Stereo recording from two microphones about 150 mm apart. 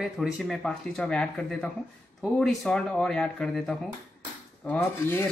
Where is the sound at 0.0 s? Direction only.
Centre (ahead or behind).